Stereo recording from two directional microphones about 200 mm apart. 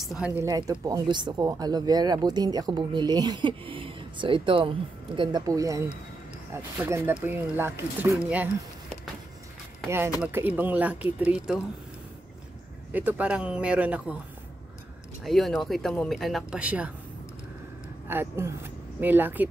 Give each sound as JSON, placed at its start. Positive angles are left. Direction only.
{"t": 0.0, "sound": "speech", "side_deg": 0}
{"t": 0.4, "sound": "speech", "side_deg": -15}
{"t": 9.8, "sound": "speech", "side_deg": -10}
{"t": 12.9, "sound": "speech", "side_deg": -5}
{"t": 15.2, "sound": "speech", "side_deg": 0}
{"t": 18.0, "sound": "speech", "side_deg": -10}